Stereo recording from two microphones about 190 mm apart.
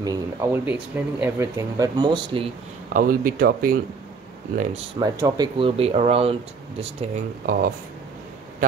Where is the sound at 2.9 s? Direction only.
50° right (ahead or behind).